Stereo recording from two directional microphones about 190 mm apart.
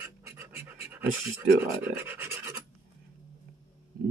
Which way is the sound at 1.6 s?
10° right (ahead or behind).